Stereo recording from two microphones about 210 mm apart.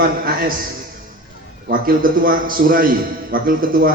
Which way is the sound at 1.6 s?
45° right (ahead or behind).